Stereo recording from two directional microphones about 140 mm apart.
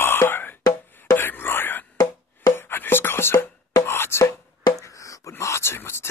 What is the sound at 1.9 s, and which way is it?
Music, 15° left (ahead or behind).